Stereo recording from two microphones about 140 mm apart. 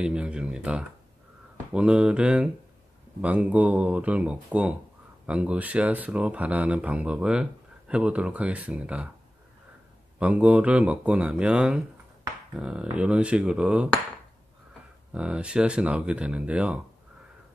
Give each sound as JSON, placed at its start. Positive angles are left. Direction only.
{"t": 0.0, "sound": "speech", "side_deg": -5}
{"t": 10.1, "sound": "speech", "side_deg": -10}
{"t": 15.1, "sound": "speech", "side_deg": -5}